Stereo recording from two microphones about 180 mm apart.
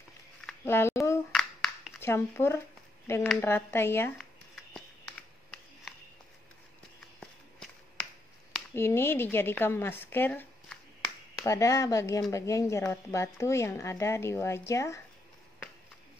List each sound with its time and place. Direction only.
0.5 s speech: 15° left (ahead or behind)
1.3 s a sound: centre (ahead or behind)
2.0 s a woman's voice: 15° left (ahead or behind)
8.7 s a woman's voice: 15° left (ahead or behind)